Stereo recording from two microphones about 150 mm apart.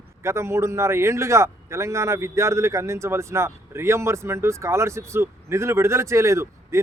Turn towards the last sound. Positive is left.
turn(degrees=-20)  # may be behind; listen again after turning